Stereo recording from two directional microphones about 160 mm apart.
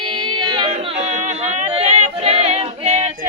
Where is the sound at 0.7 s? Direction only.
35° right (ahead or behind).